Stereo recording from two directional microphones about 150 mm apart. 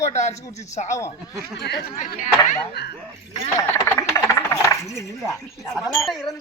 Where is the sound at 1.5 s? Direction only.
90° left; by 2.3 s 60° left (ahead or behind).